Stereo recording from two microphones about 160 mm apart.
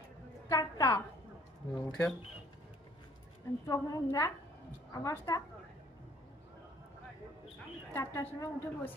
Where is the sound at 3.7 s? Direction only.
20° left (ahead or behind).